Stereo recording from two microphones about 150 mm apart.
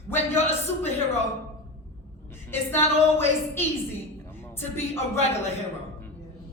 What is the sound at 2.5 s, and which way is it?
A woman's voice, 15° left (ahead or behind).